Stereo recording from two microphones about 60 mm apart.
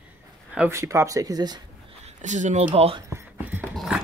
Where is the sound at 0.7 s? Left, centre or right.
Right.